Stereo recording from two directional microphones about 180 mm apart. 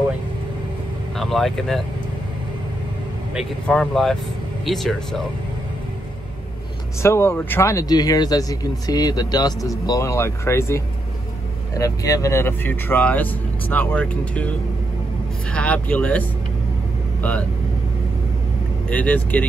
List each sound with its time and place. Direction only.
1.1 s speech: centre (ahead or behind)
3.6 s speech: centre (ahead or behind)
7.0 s speech: 15° left (ahead or behind)
15.5 s speech: 5° left (ahead or behind)
18.9 s speech: 10° left (ahead or behind)